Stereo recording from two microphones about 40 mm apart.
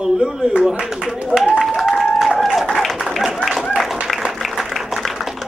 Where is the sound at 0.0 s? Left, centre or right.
Centre.